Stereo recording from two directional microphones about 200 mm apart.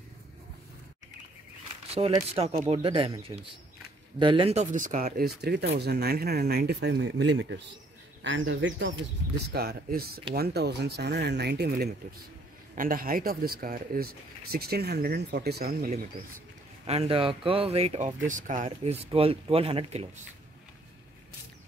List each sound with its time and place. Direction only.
1.9 s speech: 30° right (ahead or behind); by 8.9 s 65° right (ahead or behind)
9.5 s speech: 50° right (ahead or behind)
12.7 s speech: 45° right (ahead or behind)
16.8 s speech: 30° right (ahead or behind)
19.0 s speech: 30° right (ahead or behind)